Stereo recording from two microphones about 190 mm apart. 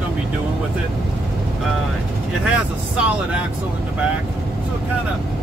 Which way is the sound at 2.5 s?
5° right (ahead or behind).